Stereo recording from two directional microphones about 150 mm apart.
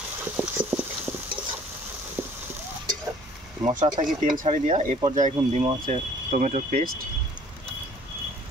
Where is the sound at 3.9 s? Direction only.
50° right (ahead or behind).